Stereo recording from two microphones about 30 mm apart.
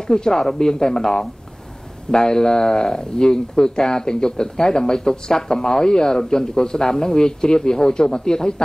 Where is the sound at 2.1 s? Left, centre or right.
Left.